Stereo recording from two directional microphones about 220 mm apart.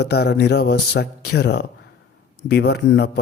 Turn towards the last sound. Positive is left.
turn(degrees=50)  # may be behind; listen again after turning